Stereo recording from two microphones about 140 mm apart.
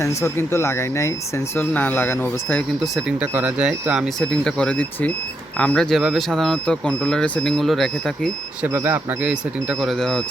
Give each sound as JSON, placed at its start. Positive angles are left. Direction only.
{"t": 0.0, "sound": "speech", "side_deg": 20}
{"t": 2.8, "sound": "speech", "side_deg": -5}
{"t": 8.6, "sound": "speech", "side_deg": -15}